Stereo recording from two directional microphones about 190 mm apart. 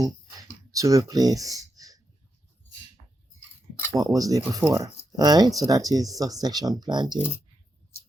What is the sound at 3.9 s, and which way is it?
Speech, 20° right (ahead or behind).